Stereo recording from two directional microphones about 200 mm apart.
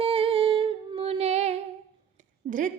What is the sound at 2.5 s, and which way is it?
Speech, 40° right (ahead or behind).